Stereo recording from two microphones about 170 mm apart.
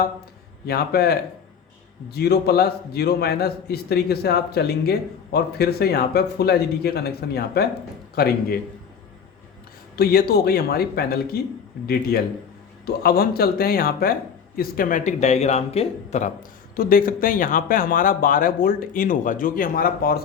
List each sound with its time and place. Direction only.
0.6 s a man's voice: 70° left (ahead or behind)
9.9 s speech: 65° left (ahead or behind); by 16.3 s 40° left (ahead or behind)
16.7 s speech: 55° left (ahead or behind)